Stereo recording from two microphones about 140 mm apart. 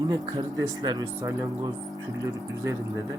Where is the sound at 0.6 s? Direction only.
25° right (ahead or behind).